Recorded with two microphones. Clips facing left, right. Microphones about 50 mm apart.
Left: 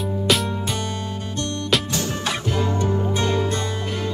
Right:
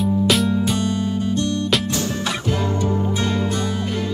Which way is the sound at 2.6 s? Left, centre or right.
Left.